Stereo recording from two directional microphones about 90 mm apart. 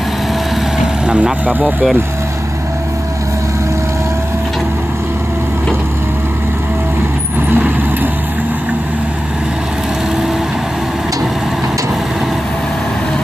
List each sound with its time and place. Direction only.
1.0 s speech: 15° right (ahead or behind)
7.5 s vehicle: 20° right (ahead or behind)